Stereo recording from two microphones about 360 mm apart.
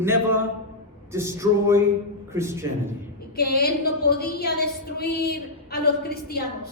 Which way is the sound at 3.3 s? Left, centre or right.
Left.